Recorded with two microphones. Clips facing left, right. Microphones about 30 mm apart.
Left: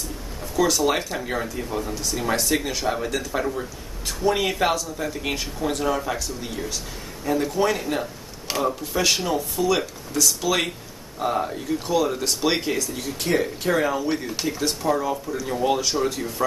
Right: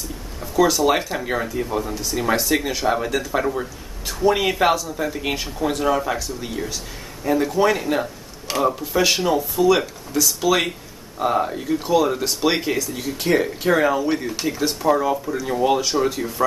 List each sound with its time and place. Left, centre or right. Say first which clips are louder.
0.4 s speech: right 3 dB; centre
8.5 s speech: right 4 dB; centre